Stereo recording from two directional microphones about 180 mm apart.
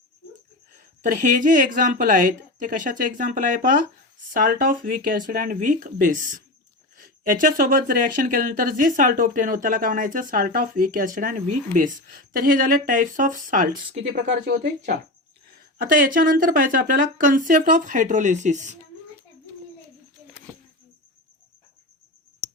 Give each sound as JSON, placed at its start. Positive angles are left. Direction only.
{"t": 0.8, "sound": "speech", "side_deg": -45}
{"t": 14.4, "sound": "speech", "side_deg": -60}
{"t": 15.4, "sound": "speech", "side_deg": -50}